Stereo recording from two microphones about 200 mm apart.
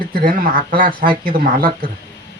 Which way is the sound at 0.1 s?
50° right (ahead or behind).